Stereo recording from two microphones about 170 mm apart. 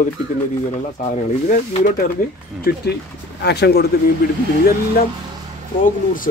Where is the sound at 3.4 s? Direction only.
75° left (ahead or behind).